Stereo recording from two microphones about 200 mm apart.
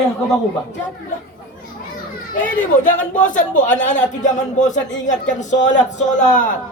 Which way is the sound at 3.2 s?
40° left (ahead or behind).